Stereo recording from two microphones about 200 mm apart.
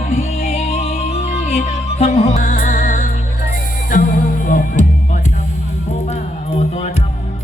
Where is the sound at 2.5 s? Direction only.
50° left (ahead or behind).